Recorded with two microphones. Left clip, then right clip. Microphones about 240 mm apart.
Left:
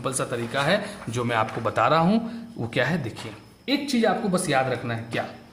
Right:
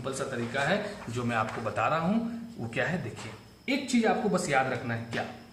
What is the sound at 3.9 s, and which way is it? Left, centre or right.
Speech, left.